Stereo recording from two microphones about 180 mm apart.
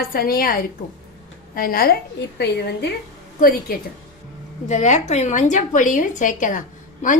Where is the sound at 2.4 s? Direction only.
65° left (ahead or behind).